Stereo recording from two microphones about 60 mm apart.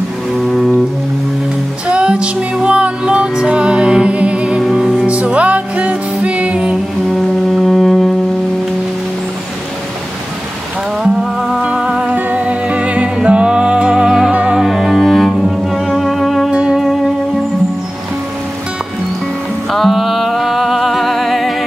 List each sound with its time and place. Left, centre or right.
0.4 s music: centre
1.9 s music: centre
4.6 s music: centre
5.0 s music: right
7.1 s music: centre
11.1 s music: centre
14.6 s cello: centre
16.4 s music: centre
19.7 s music: centre